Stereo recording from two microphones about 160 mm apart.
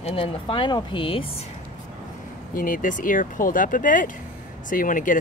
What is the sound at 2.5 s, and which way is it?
Speech, 55° left (ahead or behind).